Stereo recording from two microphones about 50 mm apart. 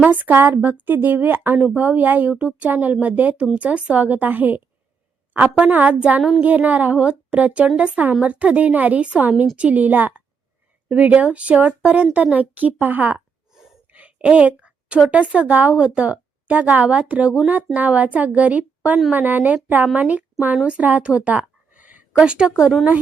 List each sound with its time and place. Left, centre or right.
0.0 s a woman's voice: right
5.3 s a woman's voice: right
13.9 s a sound: right
15.1 s a woman's voice: right
21.0 s a sound: right
22.2 s speech: centre